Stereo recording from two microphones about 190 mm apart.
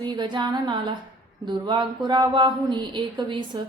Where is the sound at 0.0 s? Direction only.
25° right (ahead or behind).